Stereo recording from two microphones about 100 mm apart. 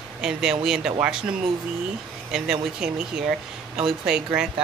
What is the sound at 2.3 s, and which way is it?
Speech, 10° right (ahead or behind).